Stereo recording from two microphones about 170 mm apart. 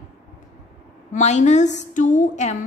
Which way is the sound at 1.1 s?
45° left (ahead or behind).